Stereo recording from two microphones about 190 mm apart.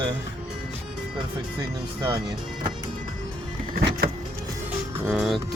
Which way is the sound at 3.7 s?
55° right (ahead or behind).